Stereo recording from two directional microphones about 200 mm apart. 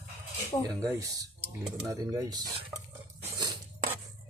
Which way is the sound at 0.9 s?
15° right (ahead or behind).